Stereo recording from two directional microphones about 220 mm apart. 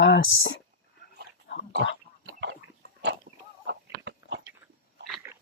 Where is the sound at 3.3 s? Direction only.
40° right (ahead or behind).